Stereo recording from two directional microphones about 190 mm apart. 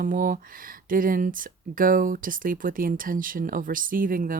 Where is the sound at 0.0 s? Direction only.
45° right (ahead or behind).